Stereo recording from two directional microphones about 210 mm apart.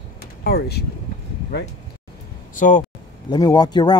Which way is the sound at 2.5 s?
35° left (ahead or behind).